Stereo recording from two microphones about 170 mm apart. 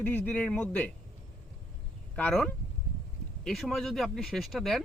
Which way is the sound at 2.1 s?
5° left (ahead or behind).